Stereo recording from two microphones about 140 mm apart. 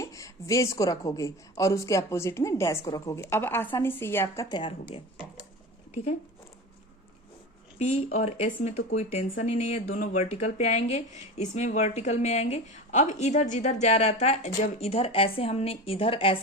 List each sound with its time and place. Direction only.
0.0 s a woman's voice: 25° left (ahead or behind)
4.4 s speech: 35° left (ahead or behind)
7.8 s a woman's voice: 50° left (ahead or behind)
10.0 s a woman's voice: 65° left (ahead or behind); by 16.4 s 40° left (ahead or behind)